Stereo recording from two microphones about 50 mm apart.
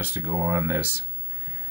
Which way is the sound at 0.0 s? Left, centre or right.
Right.